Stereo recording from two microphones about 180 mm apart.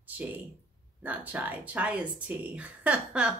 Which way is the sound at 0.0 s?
10° right (ahead or behind).